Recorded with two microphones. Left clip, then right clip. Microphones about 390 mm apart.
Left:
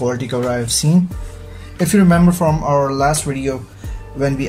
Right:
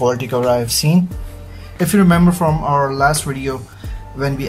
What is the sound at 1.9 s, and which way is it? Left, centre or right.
Speech, centre.